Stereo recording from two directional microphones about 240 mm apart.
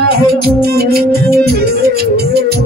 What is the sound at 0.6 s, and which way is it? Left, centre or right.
Music, right.